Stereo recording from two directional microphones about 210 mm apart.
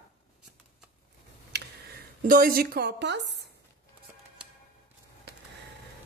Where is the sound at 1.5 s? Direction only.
55° right (ahead or behind).